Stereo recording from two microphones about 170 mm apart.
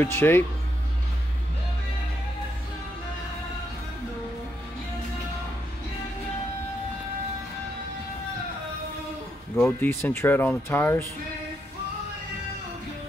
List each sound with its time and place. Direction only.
0.0 s speech: 15° left (ahead or behind)
9.6 s speech: 15° left (ahead or behind)